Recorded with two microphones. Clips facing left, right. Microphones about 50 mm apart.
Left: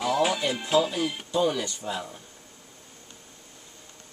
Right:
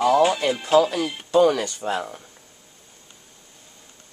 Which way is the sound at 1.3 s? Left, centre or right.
Right.